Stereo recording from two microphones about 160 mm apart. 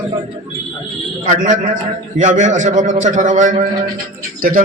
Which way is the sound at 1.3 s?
55° right (ahead or behind).